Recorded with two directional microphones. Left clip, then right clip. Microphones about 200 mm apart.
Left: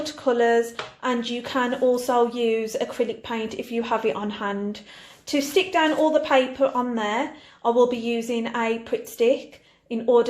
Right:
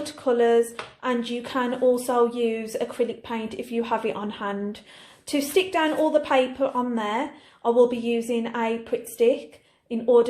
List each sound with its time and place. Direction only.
0.0 s a woman's voice: centre (ahead or behind)